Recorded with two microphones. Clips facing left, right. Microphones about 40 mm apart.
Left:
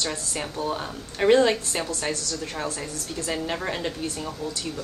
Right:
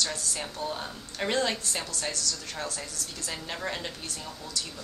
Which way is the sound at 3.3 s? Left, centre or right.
Centre.